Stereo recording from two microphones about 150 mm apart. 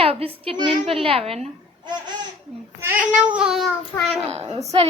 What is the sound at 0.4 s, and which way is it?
A child's voice, 30° right (ahead or behind).